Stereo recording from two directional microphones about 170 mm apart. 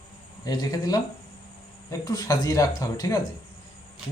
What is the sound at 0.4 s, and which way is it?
Speech, 25° left (ahead or behind).